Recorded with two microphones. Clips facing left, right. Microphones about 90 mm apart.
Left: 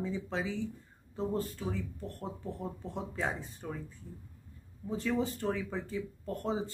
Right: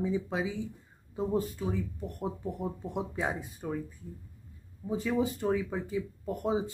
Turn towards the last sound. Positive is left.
turn(degrees=-10)  # may be behind; listen again after turning